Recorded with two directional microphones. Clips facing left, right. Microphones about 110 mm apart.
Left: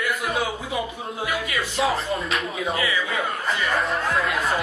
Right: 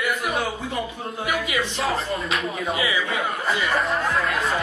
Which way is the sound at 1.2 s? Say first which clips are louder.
Right 2 dB; 15° right (ahead or behind).